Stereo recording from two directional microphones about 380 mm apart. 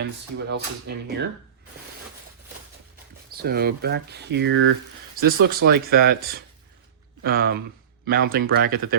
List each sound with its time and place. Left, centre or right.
0.0 s speech: right
3.3 s speech: right